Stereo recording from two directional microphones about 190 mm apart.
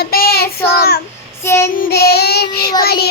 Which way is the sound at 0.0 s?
55° left (ahead or behind).